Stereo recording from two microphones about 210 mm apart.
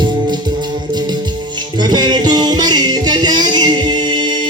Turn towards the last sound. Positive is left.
turn(degrees=-20)  # may be behind; listen again after turning